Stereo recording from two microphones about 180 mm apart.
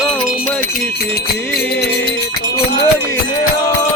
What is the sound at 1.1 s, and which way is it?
Music, 60° left (ahead or behind).